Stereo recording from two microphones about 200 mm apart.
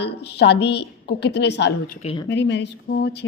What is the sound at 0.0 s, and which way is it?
Speech, 55° left (ahead or behind).